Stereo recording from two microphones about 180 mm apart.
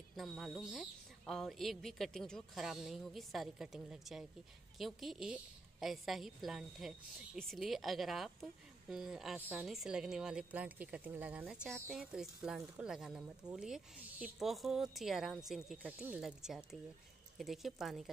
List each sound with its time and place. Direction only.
0.1 s a woman's voice: centre (ahead or behind)